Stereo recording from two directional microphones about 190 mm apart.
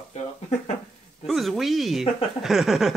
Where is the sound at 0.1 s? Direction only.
35° left (ahead or behind).